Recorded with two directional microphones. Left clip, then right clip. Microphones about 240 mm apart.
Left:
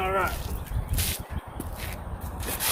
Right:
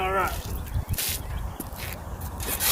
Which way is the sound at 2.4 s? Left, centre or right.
Centre.